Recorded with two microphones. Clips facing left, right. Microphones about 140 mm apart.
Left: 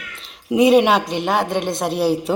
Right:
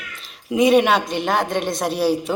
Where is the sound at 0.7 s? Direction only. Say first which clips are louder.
Left 2 dB; 25° left (ahead or behind).